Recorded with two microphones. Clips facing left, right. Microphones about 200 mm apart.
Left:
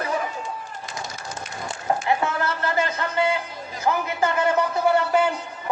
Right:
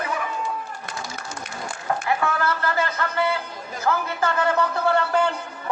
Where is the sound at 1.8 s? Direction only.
25° left (ahead or behind).